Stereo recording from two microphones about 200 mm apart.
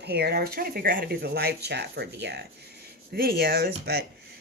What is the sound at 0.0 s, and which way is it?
Speech, 55° right (ahead or behind).